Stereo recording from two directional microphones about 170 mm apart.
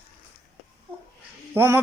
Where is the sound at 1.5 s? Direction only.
10° right (ahead or behind).